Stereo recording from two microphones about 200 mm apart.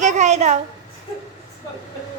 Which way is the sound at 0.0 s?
35° right (ahead or behind).